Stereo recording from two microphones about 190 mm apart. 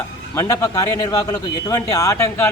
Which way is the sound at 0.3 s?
15° left (ahead or behind).